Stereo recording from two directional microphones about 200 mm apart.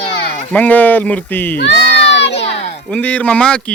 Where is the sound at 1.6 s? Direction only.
60° left (ahead or behind).